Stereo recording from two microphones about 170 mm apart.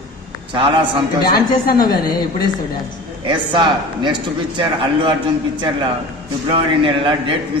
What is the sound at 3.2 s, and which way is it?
A man's voice, 25° right (ahead or behind).